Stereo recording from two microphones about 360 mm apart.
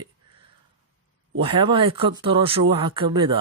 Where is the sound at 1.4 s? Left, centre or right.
Centre.